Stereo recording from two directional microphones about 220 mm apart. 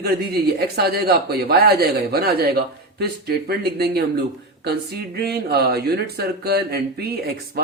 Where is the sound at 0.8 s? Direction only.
45° right (ahead or behind).